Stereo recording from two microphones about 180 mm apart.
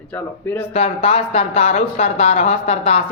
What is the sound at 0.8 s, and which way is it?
Speech, 35° left (ahead or behind).